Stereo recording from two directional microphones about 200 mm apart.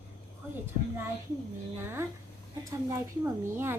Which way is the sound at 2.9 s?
15° right (ahead or behind).